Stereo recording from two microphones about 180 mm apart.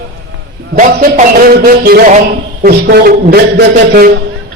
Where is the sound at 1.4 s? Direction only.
55° right (ahead or behind).